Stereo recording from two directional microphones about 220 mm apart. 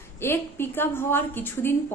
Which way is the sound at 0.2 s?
10° left (ahead or behind).